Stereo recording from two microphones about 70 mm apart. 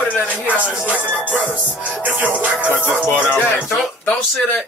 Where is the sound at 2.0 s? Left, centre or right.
Right.